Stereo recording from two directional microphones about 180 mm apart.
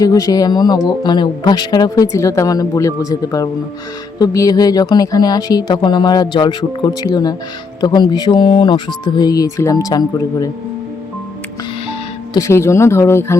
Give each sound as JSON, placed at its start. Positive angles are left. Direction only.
{"t": 0.0, "sound": "speech", "side_deg": 20}
{"t": 11.9, "sound": "speech", "side_deg": 20}